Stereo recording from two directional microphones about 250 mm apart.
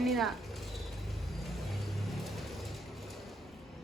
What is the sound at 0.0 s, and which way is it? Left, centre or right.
Speech, centre.